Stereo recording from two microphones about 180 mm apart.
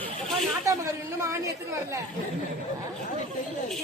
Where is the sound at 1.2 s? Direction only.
15° right (ahead or behind).